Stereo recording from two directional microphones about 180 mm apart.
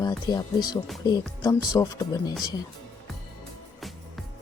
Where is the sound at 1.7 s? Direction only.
20° left (ahead or behind).